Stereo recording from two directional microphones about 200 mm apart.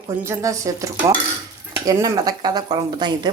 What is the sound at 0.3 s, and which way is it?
A woman's voice, 15° right (ahead or behind).